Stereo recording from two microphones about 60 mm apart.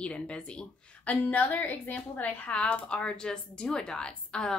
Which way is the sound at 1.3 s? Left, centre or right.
Left.